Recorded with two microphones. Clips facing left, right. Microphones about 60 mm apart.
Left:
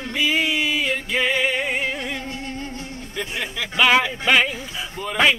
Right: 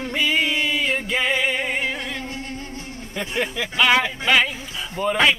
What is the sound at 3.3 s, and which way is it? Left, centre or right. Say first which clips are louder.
Speech: right 6 dB; right.